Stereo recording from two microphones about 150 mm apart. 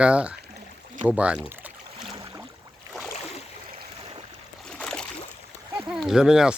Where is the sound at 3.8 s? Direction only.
35° right (ahead or behind).